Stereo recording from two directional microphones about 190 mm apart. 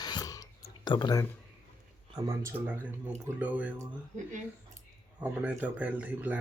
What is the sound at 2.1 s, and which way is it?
Speech, 15° right (ahead or behind).